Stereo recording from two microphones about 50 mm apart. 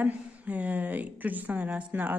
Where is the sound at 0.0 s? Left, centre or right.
Right.